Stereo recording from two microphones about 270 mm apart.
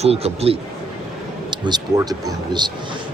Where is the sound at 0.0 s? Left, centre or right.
Right.